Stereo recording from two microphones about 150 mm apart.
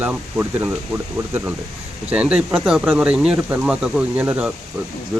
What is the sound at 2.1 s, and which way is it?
Speech, 10° right (ahead or behind).